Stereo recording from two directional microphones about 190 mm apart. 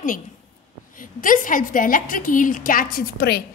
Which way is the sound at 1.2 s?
45° left (ahead or behind).